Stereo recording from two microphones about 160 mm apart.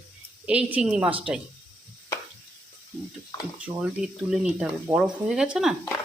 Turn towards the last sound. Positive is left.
turn(degrees=-5)  # may be behind; listen again after turning